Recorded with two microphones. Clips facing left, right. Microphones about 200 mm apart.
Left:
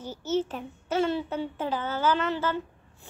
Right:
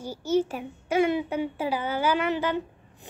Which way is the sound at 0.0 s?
10° right (ahead or behind).